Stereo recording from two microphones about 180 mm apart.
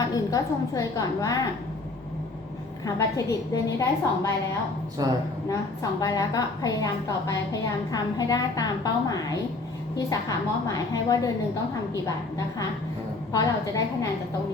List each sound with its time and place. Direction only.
0.0 s a woman's voice: 20° left (ahead or behind)
2.8 s a woman's voice: 20° left (ahead or behind)
5.0 s a woman's voice: 20° right (ahead or behind)
5.5 s a woman's voice: 20° left (ahead or behind)
13.3 s a woman's voice: 20° left (ahead or behind)